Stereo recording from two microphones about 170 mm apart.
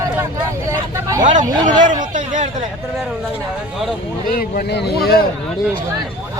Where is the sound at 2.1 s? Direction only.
45° right (ahead or behind).